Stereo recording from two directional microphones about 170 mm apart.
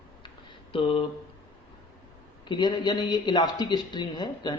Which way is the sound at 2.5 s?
25° left (ahead or behind).